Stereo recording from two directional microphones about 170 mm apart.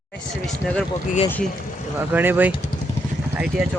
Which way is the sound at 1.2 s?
10° left (ahead or behind).